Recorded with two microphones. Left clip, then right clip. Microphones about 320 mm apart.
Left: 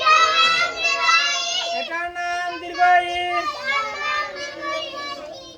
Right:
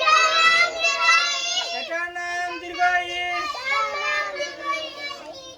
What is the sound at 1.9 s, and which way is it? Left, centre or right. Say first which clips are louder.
Child singing: left 1 dB; centre.